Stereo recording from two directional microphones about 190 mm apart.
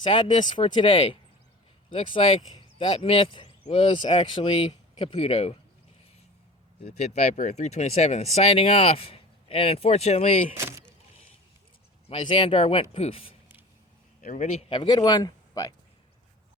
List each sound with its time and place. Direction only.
0.0 s speech: 25° left (ahead or behind)
6.8 s speech: 35° left (ahead or behind)
10.6 s speech: 15° right (ahead or behind)
12.0 s speech: 30° left (ahead or behind)
14.2 s a man's voice: 40° left (ahead or behind)
14.7 s speech: 25° left (ahead or behind)